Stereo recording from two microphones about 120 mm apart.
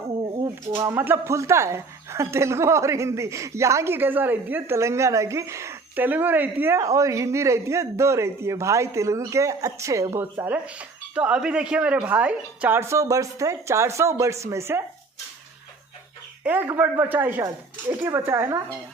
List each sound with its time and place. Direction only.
0.4 s a sound: 25° right (ahead or behind)
0.9 s a woman's voice: 20° right (ahead or behind)
16.4 s a woman's voice: 15° right (ahead or behind)